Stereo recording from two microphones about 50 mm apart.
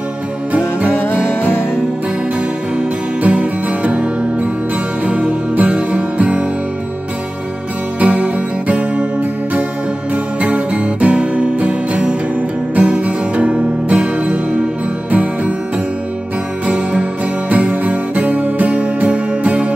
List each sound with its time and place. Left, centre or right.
0.5 s music: right
1.1 s music: left
3.2 s music: right
8.0 s music: right
10.1 s music: right
16.6 s music: right